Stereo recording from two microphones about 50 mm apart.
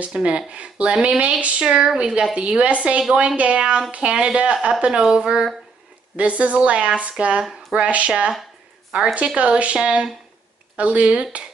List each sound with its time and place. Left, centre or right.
0.1 s speech: centre
6.1 s speech: right